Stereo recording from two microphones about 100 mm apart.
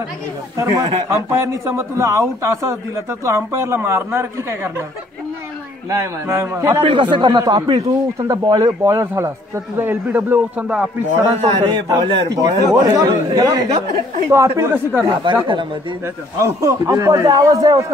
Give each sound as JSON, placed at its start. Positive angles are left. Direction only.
{"t": 0.6, "sound": "a man's voice", "side_deg": -30}
{"t": 5.9, "sound": "speech", "side_deg": -25}
{"t": 6.8, "sound": "speech", "side_deg": -55}
{"t": 8.3, "sound": "a man's voice", "side_deg": -40}
{"t": 8.8, "sound": "a man's voice", "side_deg": -30}
{"t": 11.7, "sound": "a man's voice", "side_deg": -45}
{"t": 15.3, "sound": "speech", "side_deg": -55}
{"t": 16.3, "sound": "a man's voice", "side_deg": -30}